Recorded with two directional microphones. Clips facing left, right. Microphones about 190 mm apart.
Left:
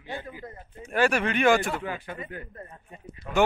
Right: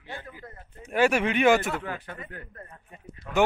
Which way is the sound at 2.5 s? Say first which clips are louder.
Left 3 dB; 20° left (ahead or behind).